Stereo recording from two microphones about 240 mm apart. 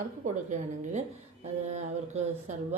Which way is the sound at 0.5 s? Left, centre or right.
Right.